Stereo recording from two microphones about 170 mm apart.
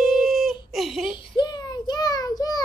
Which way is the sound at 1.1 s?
30° left (ahead or behind).